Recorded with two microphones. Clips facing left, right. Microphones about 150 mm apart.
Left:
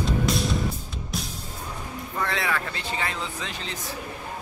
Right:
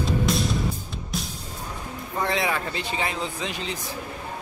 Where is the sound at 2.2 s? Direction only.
20° right (ahead or behind).